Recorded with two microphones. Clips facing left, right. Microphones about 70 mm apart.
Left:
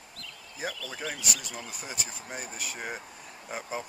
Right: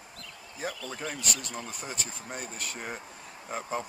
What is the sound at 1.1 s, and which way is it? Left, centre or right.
Speech, centre.